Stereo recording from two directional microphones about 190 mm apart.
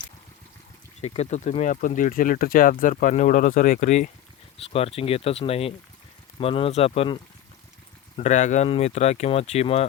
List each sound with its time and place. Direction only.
1.0 s speech: 35° left (ahead or behind)